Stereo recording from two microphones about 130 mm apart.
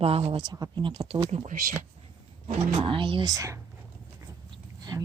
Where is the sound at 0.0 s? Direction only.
45° right (ahead or behind).